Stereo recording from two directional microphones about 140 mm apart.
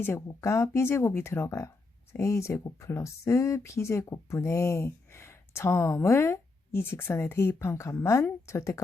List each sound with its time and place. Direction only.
0.0 s speech: 20° left (ahead or behind)